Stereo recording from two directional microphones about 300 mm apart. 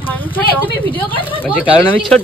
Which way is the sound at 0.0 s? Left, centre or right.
Centre.